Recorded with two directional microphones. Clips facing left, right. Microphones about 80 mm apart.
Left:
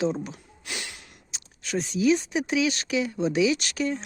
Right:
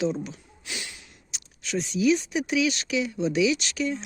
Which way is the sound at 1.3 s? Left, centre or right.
Left.